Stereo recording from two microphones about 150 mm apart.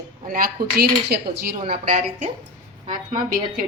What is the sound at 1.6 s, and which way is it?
Speech, 45° right (ahead or behind).